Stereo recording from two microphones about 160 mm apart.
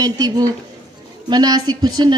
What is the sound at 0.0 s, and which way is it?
A woman's voice, 25° right (ahead or behind).